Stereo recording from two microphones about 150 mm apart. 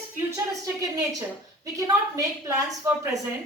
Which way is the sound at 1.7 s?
25° right (ahead or behind).